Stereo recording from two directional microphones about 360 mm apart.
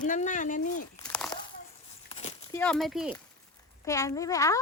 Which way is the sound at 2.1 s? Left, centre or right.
Centre.